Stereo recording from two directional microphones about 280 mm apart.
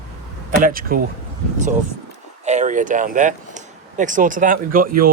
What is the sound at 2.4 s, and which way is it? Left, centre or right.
Speech, right.